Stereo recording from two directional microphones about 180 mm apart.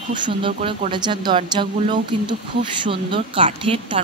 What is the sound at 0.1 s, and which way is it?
Speech, 25° right (ahead or behind).